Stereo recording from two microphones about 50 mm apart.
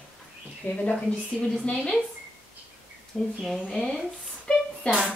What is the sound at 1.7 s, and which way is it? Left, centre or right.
Speech, centre.